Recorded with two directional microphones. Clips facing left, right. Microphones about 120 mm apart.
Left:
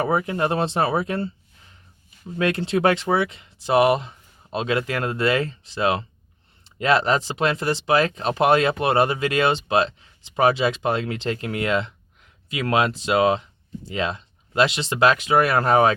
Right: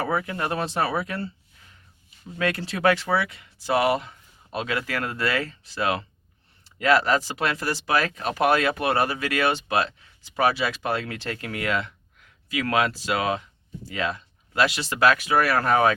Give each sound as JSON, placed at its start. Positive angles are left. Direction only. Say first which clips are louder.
{"t": 0.0, "sound": "speech", "louder": "left 5 dB", "side_deg": 25}
{"t": 2.4, "sound": "speech", "louder": "left 3 dB", "side_deg": 25}